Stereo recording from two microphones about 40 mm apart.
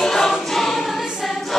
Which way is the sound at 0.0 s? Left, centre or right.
Centre.